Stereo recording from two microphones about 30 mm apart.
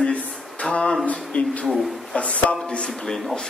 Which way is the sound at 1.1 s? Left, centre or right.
Left.